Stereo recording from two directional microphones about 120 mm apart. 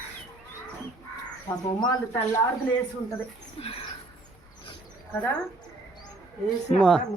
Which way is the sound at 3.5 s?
55° left (ahead or behind).